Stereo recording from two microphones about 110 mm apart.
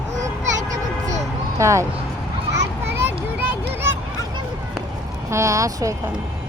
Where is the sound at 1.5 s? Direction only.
25° right (ahead or behind).